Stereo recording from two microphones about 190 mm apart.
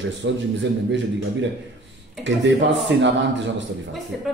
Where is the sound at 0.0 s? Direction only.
70° right (ahead or behind).